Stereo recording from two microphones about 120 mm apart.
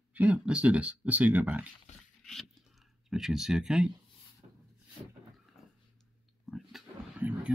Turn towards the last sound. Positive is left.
turn(degrees=-15)  # may be behind; listen again after turning